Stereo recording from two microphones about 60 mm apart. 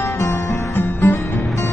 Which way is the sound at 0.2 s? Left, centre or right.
Left.